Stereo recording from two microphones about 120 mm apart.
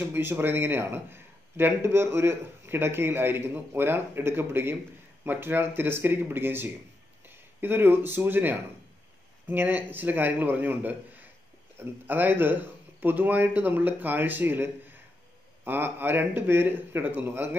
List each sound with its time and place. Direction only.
0.0 s a man's voice: 20° right (ahead or behind)